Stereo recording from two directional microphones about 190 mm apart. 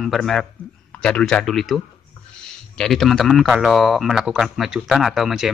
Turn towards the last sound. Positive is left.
turn(degrees=0)  # may be behind; listen again after turning